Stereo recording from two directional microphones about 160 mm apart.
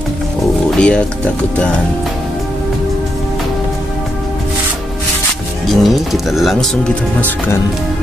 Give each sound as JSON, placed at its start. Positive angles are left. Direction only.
{"t": 0.7, "sound": "roaring cats", "side_deg": 5}
{"t": 5.7, "sound": "speech", "side_deg": 0}